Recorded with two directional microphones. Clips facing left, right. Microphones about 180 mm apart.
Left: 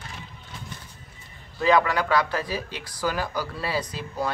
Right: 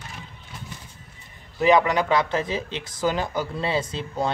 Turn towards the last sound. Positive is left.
turn(degrees=-25)  # may be behind; listen again after turning